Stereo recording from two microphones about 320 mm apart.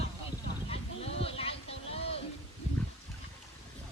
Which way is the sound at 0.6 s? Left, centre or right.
Centre.